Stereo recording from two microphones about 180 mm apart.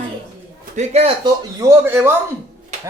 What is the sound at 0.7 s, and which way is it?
Speech, 35° right (ahead or behind).